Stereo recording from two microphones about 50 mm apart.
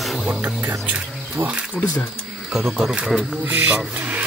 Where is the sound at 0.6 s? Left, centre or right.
Right.